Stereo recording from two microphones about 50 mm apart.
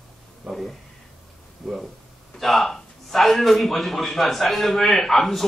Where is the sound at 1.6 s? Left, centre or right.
Centre.